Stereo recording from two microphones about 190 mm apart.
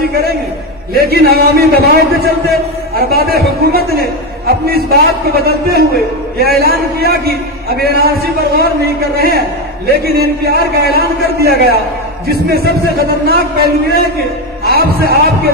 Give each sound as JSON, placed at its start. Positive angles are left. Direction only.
{"t": 0.9, "sound": "a man's voice", "side_deg": -55}
{"t": 9.8, "sound": "a man's voice", "side_deg": -55}